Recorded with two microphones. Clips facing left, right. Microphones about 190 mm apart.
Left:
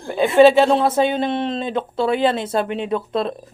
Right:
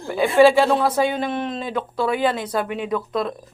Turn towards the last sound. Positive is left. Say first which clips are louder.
# left 2 dB
turn(degrees=25)  # may be behind; listen again after turning